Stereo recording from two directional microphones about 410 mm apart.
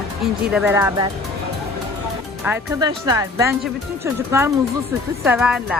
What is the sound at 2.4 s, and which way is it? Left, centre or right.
A woman's voice, centre.